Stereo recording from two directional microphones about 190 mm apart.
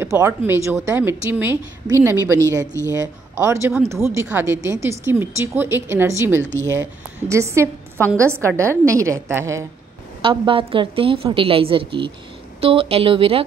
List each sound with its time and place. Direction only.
0.0 s a sound: 15° right (ahead or behind)
0.5 s a woman's voice: 15° right (ahead or behind)
2.6 s speech: 15° left (ahead or behind)
2.9 s a woman's voice: 15° right (ahead or behind)
10.2 s a woman's voice: 30° right (ahead or behind)